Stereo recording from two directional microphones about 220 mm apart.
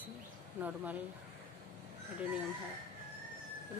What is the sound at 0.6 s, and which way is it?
Speech, 5° right (ahead or behind).